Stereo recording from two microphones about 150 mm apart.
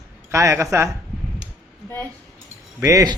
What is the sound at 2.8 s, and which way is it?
Speech, 25° right (ahead or behind).